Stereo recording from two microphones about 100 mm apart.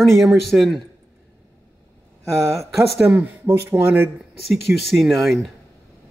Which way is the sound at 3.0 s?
15° right (ahead or behind).